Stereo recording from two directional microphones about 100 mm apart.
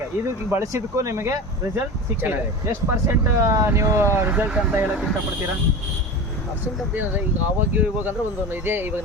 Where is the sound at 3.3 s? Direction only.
30° right (ahead or behind).